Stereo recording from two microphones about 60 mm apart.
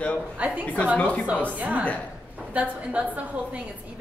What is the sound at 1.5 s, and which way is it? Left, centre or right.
A woman's voice, right.